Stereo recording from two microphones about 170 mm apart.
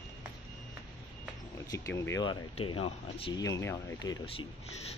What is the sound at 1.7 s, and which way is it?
Speech, 15° left (ahead or behind).